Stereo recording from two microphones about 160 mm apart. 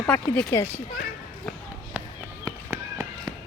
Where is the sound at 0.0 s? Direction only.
10° left (ahead or behind).